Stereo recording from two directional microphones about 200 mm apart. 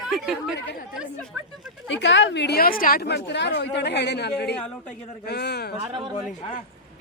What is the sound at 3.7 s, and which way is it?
Speech, 60° left (ahead or behind).